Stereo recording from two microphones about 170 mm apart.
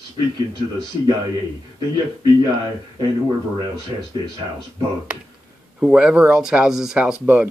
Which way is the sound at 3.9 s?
25° right (ahead or behind).